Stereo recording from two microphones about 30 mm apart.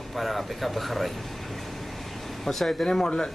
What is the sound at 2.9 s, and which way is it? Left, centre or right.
Speech, left.